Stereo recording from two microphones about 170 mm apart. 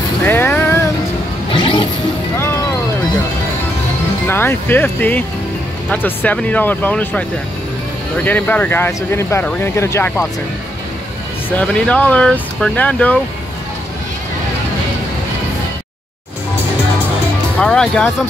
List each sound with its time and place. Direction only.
0.2 s music: 10° left (ahead or behind)
1.5 s zipper: 30° left (ahead or behind)
2.3 s music: 15° left (ahead or behind)
4.3 s speech: 15° left (ahead or behind)
11.5 s speech: 5° left (ahead or behind)
17.6 s speech: 5° left (ahead or behind)